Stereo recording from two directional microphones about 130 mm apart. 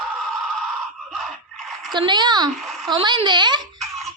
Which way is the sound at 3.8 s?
Centre (ahead or behind).